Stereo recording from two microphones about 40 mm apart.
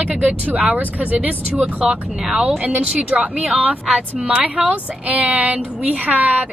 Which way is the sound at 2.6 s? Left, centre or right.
Right.